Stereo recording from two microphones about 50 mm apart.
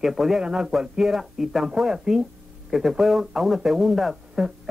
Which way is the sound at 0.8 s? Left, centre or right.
Centre.